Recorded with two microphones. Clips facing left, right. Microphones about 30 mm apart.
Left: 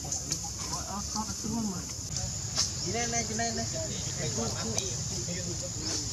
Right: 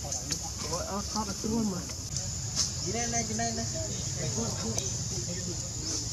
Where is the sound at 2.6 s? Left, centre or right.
Centre.